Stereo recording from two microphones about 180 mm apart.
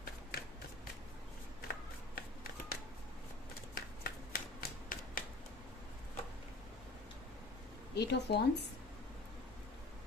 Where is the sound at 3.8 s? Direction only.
55° left (ahead or behind).